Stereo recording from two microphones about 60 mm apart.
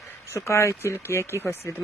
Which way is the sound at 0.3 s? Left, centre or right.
Left.